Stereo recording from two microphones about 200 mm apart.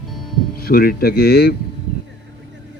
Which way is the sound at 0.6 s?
50° left (ahead or behind).